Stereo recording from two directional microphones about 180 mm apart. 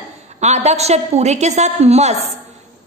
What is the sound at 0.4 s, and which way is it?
A woman's voice, 40° right (ahead or behind).